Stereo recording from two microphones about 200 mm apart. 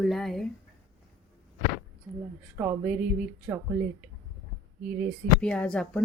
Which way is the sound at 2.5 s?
10° right (ahead or behind).